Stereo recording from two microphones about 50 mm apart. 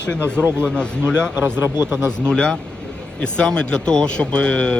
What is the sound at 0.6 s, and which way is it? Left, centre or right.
Speech, centre.